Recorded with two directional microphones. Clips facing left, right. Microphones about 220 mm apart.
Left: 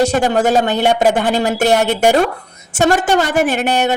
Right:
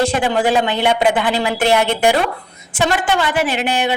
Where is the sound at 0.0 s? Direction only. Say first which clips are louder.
Left 3 dB; 40° left (ahead or behind).